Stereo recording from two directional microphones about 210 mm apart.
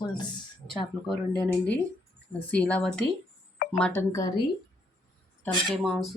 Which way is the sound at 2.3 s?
5° left (ahead or behind).